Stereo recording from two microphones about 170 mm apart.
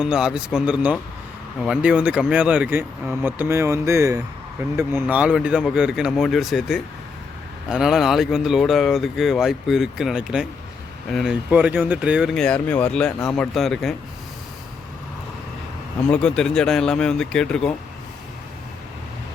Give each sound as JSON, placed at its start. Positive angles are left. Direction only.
{"t": 0.0, "sound": "speech", "side_deg": -5}
{"t": 16.0, "sound": "speech", "side_deg": 5}